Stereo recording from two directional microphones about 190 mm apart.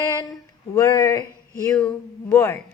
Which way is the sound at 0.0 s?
20° left (ahead or behind).